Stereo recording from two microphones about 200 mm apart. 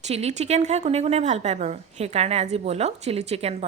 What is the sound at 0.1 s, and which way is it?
A woman's voice, 30° right (ahead or behind).